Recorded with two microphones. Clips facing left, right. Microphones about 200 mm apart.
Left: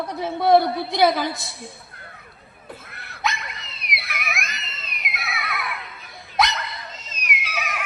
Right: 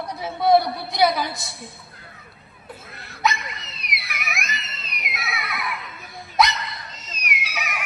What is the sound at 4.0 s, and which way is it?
Screaming, 60° left (ahead or behind).